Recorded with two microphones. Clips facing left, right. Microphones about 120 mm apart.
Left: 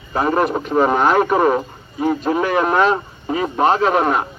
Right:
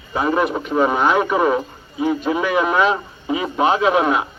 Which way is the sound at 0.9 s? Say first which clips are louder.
Left 2 dB; 45° left (ahead or behind).